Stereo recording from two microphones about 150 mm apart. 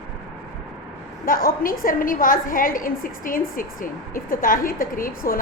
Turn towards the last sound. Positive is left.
turn(degrees=70)  # may be behind; listen again after turning